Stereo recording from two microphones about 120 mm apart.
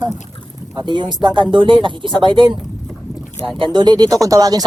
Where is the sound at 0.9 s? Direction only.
40° right (ahead or behind).